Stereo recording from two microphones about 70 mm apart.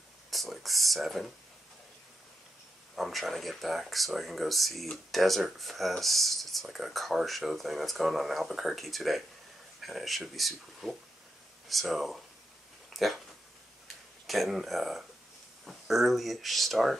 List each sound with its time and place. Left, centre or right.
0.3 s speech: centre
3.0 s speech: centre
12.9 s dog: centre
14.2 s speech: centre